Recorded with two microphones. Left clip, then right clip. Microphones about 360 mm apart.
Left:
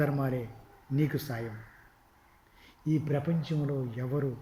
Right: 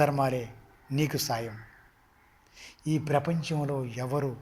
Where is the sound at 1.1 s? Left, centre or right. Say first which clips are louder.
Right 6 dB; centre.